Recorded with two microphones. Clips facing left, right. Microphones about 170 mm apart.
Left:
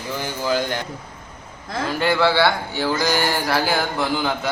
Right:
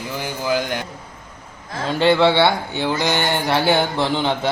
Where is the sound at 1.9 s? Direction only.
25° right (ahead or behind).